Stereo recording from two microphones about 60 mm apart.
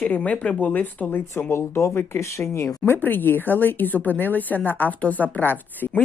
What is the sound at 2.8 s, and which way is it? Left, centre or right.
Speech, left.